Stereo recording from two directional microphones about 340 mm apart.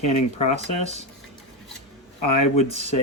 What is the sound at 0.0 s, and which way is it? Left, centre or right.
Speech, centre.